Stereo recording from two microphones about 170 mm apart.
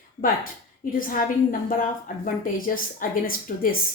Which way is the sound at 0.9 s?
55° left (ahead or behind).